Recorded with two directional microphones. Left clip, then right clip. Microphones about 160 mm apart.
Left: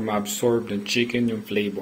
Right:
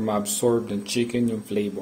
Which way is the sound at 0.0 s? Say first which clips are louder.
Even; 15° right (ahead or behind).